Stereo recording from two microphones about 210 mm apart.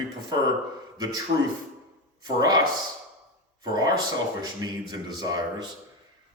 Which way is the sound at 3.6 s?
20° right (ahead or behind).